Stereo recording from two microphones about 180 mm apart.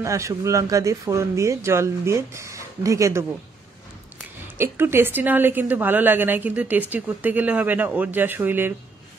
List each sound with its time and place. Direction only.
0.0 s a woman's voice: 15° right (ahead or behind)
4.6 s a woman's voice: 15° right (ahead or behind)